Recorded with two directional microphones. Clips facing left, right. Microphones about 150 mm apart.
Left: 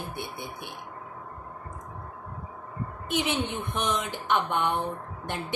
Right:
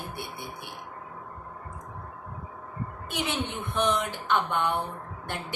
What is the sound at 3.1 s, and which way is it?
A woman's voice, 20° left (ahead or behind).